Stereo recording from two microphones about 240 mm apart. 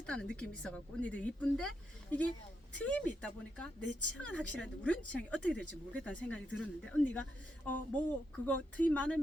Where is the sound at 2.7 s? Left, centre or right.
Centre.